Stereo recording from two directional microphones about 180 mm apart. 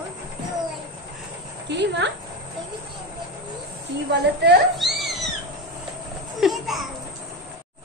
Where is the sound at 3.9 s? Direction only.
70° right (ahead or behind).